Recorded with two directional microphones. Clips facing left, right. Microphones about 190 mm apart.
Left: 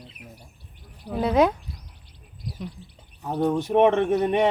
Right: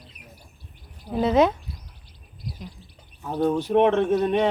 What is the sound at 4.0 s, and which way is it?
Speech, 60° left (ahead or behind).